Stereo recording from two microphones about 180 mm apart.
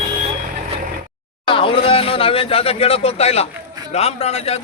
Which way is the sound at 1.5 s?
30° left (ahead or behind).